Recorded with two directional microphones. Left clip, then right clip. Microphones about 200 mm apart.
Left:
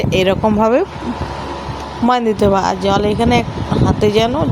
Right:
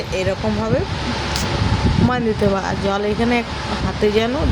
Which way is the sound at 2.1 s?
30° left (ahead or behind).